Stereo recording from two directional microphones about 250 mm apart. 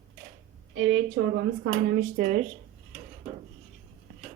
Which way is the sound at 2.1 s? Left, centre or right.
Right.